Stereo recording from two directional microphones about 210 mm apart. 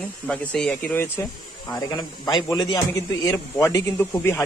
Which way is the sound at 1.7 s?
20° left (ahead or behind).